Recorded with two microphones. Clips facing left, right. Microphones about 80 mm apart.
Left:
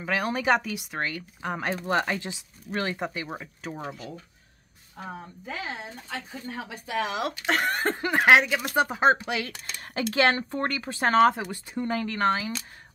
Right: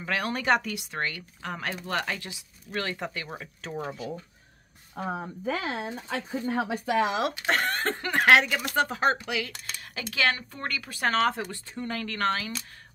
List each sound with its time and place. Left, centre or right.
0.0 s speech: centre
1.4 s speech: centre
5.1 s speech: right
7.0 s speech: right
7.4 s speech: centre